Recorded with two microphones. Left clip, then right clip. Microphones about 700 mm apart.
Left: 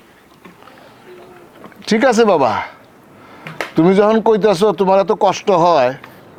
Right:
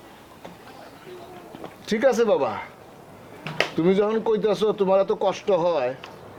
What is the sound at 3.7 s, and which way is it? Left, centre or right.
Speech, left.